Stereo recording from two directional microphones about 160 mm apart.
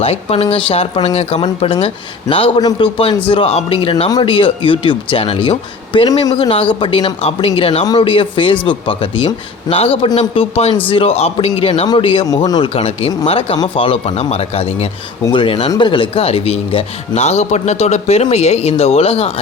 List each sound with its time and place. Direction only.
0.0 s a man's voice: 40° left (ahead or behind)